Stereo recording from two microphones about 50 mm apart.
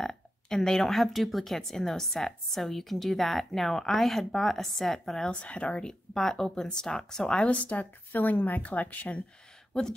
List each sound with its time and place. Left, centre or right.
0.0 s speech: centre
5.3 s speech: left
5.9 s speech: centre
7.4 s speech: left